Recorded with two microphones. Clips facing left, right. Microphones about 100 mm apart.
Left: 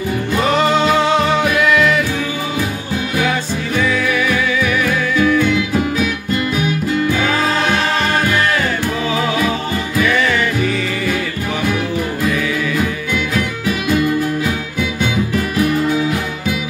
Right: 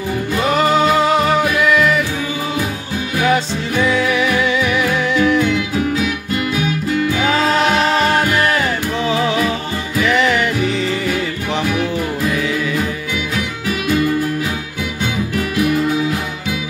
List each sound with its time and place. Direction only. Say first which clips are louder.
0.6 s music: right 2 dB; 5° right (ahead or behind)
3.8 s music: right 2 dB; 20° right (ahead or behind)
10.0 s music: right 3 dB; 20° right (ahead or behind)